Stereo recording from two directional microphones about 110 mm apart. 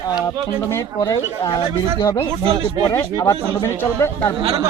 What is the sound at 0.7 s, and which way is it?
A man's voice, 30° left (ahead or behind).